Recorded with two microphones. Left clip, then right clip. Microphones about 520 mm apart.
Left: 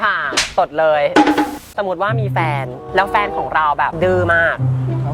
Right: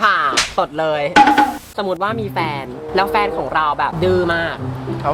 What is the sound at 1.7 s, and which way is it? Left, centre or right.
Speech, left.